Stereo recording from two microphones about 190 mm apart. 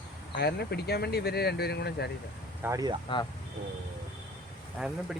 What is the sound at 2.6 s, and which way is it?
Speech, 20° right (ahead or behind).